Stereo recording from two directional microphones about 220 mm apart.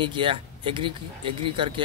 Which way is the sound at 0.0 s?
20° right (ahead or behind).